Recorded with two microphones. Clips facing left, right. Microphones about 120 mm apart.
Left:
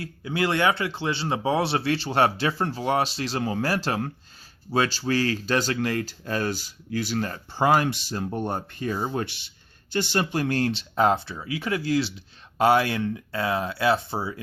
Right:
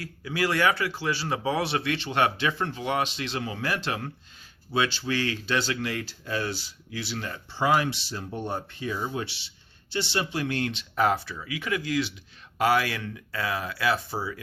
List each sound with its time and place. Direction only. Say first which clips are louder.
0.0 s speech: left 2 dB; 25° left (ahead or behind)